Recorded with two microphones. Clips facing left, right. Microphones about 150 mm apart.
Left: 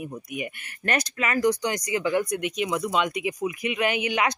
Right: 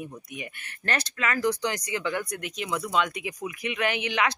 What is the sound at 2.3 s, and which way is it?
Speech, 35° right (ahead or behind).